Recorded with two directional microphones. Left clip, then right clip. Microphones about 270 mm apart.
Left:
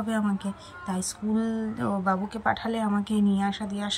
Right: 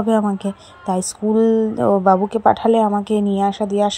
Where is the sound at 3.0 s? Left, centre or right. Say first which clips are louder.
Right 10 dB; centre.